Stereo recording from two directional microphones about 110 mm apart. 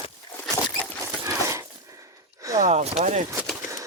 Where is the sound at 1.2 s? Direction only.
25° right (ahead or behind).